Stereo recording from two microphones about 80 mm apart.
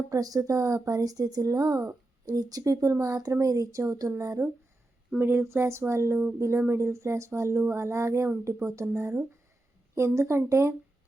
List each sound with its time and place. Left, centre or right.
0.1 s speech: right
4.2 s speech: right